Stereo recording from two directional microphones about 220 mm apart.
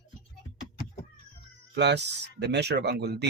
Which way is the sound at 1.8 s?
50° right (ahead or behind).